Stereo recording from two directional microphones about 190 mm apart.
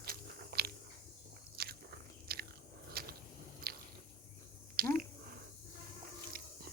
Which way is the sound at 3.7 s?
50° right (ahead or behind).